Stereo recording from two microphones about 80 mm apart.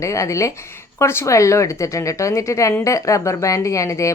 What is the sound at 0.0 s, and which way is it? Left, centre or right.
Speech, left.